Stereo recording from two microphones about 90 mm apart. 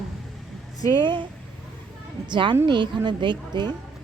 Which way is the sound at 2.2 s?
60° right (ahead or behind).